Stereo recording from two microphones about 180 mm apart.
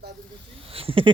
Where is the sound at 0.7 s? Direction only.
30° right (ahead or behind).